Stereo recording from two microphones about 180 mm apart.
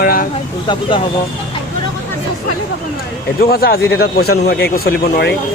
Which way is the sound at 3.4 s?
55° left (ahead or behind).